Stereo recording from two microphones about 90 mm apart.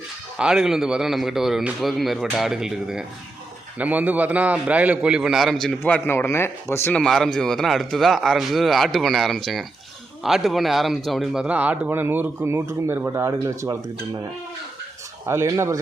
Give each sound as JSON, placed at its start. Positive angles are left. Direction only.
{"t": 0.3, "sound": "speech", "side_deg": -5}
{"t": 3.8, "sound": "a man's voice", "side_deg": -15}
{"t": 6.1, "sound": "speech", "side_deg": 30}
{"t": 6.9, "sound": "speech", "side_deg": 5}
{"t": 11.4, "sound": "speech", "side_deg": -15}
{"t": 15.3, "sound": "speech", "side_deg": -30}